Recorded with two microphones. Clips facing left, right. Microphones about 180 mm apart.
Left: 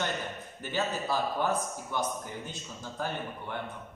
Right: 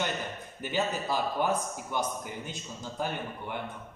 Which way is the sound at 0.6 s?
15° right (ahead or behind).